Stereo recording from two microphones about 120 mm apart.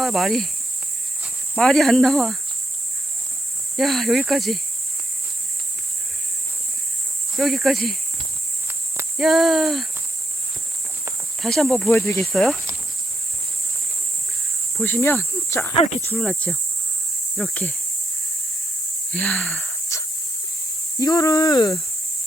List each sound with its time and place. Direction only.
0.0 s cricket: centre (ahead or behind)
1.5 s speech: 5° left (ahead or behind)
3.8 s speech: centre (ahead or behind)
7.3 s speech: centre (ahead or behind)
9.1 s speech: centre (ahead or behind)
11.4 s speech: 5° left (ahead or behind)
12.2 s speech: centre (ahead or behind)
14.8 s speech: 20° left (ahead or behind)
15.8 s speech: 70° left (ahead or behind)
16.0 s speech: 10° left (ahead or behind)
19.1 s speech: 5° left (ahead or behind)
19.9 s a sound: 25° left (ahead or behind)
21.0 s speech: 30° left (ahead or behind)